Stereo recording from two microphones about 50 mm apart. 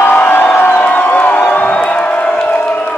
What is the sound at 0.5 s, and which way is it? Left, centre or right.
Music, left.